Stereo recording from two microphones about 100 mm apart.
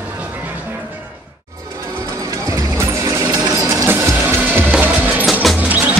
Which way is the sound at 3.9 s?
25° right (ahead or behind).